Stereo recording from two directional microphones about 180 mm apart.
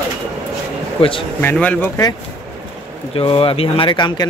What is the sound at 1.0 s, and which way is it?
Speech, 30° left (ahead or behind).